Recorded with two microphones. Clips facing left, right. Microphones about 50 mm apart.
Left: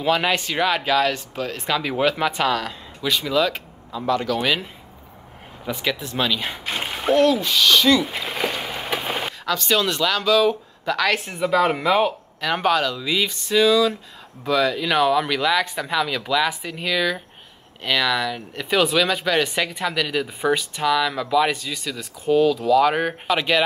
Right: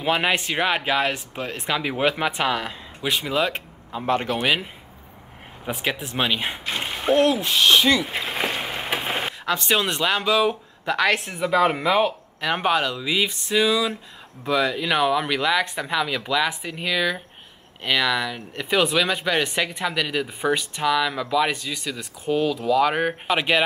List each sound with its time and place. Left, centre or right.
0.0 s speech: right
4.4 s speech: centre
5.7 s speech: right
5.9 s speech: right
7.9 s speech: centre
8.5 s a sound: right
11.1 s speech: centre
12.4 s speech: centre